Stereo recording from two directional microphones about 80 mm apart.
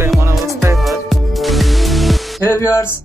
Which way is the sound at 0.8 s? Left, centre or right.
Centre.